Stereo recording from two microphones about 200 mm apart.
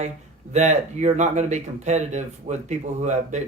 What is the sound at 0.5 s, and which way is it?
Speech, 35° right (ahead or behind).